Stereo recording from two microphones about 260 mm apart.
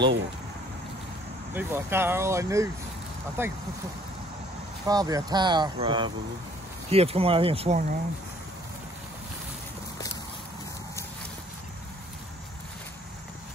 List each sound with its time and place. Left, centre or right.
1.5 s speech: centre
4.8 s speech: centre